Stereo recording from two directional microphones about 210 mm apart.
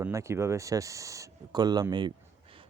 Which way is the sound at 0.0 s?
15° right (ahead or behind).